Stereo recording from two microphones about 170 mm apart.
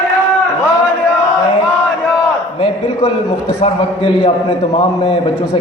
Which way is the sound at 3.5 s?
35° left (ahead or behind).